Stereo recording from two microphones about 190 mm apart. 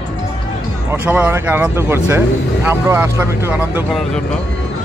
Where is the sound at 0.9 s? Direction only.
10° right (ahead or behind).